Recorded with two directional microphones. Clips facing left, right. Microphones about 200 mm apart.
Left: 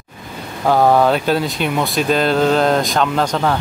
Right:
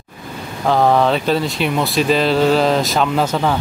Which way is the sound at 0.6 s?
5° left (ahead or behind).